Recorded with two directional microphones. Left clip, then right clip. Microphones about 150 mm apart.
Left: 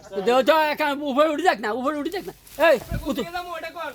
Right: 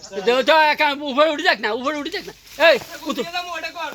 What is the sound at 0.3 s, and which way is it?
Speech, 55° left (ahead or behind).